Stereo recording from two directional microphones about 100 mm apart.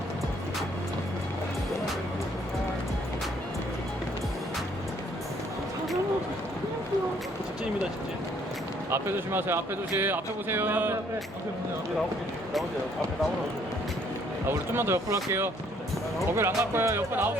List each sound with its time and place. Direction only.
8.9 s speech: 25° right (ahead or behind)
14.7 s speech: 25° right (ahead or behind)